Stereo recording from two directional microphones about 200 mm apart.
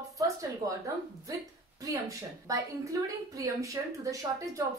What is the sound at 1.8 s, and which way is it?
A woman's voice, 15° right (ahead or behind).